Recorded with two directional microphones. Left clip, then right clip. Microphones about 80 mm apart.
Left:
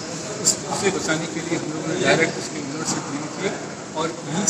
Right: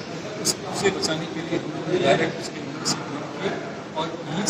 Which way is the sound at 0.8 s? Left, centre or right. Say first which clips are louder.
Even; right.